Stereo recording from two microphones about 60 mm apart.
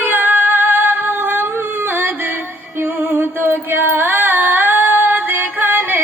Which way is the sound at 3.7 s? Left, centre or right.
Right.